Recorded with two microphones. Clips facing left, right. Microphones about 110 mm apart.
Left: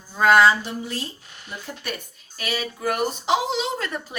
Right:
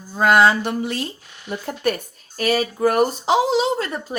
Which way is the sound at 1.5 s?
55° right (ahead or behind).